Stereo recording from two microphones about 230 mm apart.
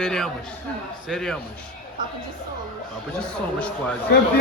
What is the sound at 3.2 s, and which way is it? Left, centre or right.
Speech, centre.